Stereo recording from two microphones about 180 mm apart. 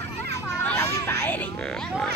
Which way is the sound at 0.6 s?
10° left (ahead or behind).